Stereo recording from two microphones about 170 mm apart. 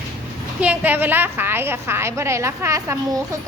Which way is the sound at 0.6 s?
10° right (ahead or behind).